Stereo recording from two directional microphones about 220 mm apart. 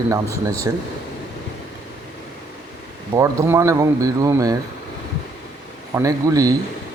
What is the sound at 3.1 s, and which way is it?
A man's voice, 15° right (ahead or behind).